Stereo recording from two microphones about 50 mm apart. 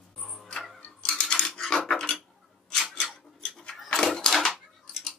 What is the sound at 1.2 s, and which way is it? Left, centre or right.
Cutlery, centre.